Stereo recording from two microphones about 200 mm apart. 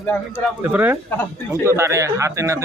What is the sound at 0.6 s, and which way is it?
Speech, 10° right (ahead or behind).